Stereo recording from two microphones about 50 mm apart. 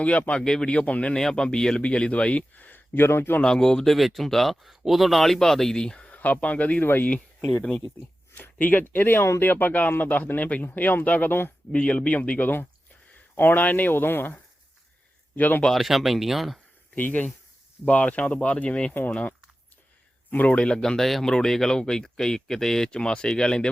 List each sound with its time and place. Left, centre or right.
0.0 s speech: left
0.4 s speech: centre
1.1 s speech: centre; by 3.3 s left
3.4 s speech: centre
6.1 s speech: left
8.4 s speech: left
11.7 s speech: left
15.4 s speech: left
15.7 s speech: centre
16.9 s speech: left
20.3 s speech: left